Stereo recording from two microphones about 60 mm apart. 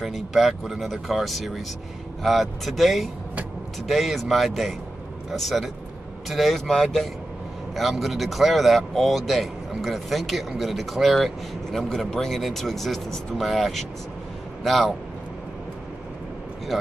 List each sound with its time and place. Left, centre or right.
0.0 s speech: centre